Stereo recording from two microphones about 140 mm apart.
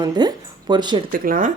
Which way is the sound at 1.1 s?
80° right.